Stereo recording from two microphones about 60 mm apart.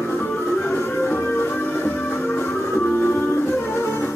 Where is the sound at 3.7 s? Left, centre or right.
Left.